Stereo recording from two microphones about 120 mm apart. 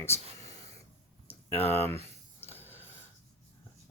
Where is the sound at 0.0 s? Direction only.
25° left (ahead or behind).